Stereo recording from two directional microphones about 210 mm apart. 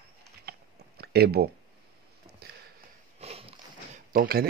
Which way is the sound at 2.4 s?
50° right (ahead or behind).